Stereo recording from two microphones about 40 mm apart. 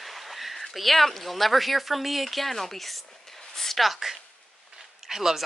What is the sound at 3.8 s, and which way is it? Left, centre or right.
Speech, centre.